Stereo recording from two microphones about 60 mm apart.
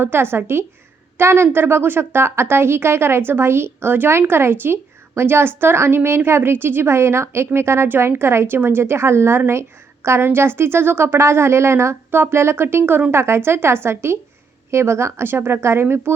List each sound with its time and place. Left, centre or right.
0.0 s a woman's voice: right